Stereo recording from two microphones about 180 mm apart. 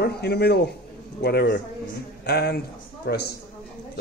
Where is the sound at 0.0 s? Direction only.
65° left (ahead or behind).